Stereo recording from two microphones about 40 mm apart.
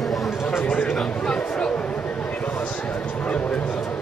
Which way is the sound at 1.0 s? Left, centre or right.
Left.